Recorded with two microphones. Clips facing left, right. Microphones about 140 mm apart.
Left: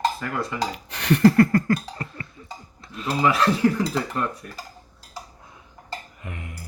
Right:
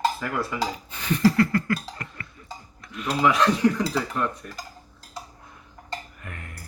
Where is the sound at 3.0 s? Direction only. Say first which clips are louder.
Even; centre (ahead or behind).